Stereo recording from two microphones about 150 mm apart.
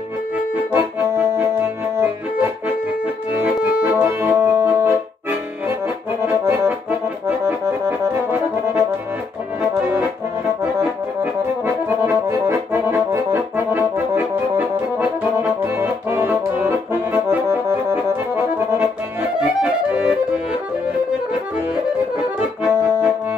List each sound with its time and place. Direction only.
0.7 s accordion: 15° right (ahead or behind)
3.8 s music: 15° right (ahead or behind)
6.2 s accordion: 15° right (ahead or behind)
11.6 s accordion: 15° right (ahead or behind)
15.0 s music: 15° right (ahead or behind)
19.6 s accordion: 5° right (ahead or behind)
22.6 s accordion: 15° right (ahead or behind)